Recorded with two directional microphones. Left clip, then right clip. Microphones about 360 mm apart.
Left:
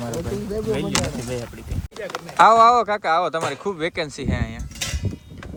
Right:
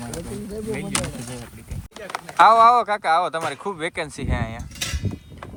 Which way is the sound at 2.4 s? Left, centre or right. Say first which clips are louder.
Even; centre.